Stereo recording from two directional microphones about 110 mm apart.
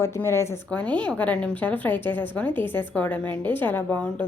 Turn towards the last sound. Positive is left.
turn(degrees=10)  # may be behind; listen again after turning